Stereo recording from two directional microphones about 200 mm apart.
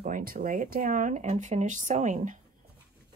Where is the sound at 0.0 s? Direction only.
45° right (ahead or behind).